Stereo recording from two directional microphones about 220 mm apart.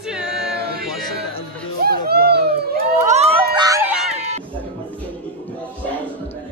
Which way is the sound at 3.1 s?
30° right (ahead or behind).